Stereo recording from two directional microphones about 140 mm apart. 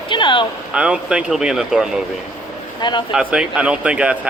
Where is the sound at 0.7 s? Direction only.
5° right (ahead or behind).